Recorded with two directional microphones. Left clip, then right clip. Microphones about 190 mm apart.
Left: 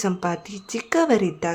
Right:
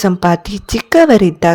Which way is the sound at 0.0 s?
40° right (ahead or behind).